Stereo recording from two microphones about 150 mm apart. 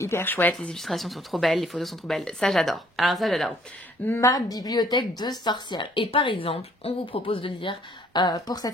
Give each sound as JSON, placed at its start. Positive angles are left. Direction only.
{"t": 0.0, "sound": "speech", "side_deg": 15}
{"t": 4.1, "sound": "a woman's voice", "side_deg": 20}